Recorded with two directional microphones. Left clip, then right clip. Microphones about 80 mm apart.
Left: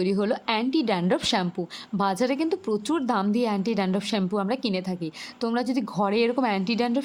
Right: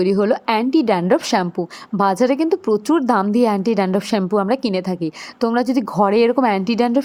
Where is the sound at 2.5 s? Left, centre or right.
Centre.